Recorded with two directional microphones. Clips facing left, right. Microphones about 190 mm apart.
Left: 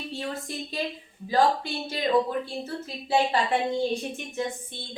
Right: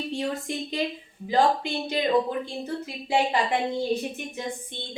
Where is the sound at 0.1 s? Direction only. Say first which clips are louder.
Right 4 dB; 20° right (ahead or behind).